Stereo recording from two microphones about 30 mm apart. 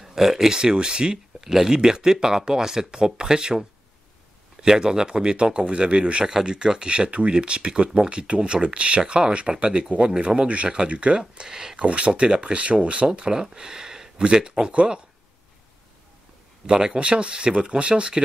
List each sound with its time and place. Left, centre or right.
0.0 s speech: centre
0.5 s speech: right
1.1 s speech: centre; by 6.2 s right
6.4 s speech: right
11.4 s speech: right
11.8 s speech: right
13.3 s speech: right
16.7 s speech: right
17.0 s speech: right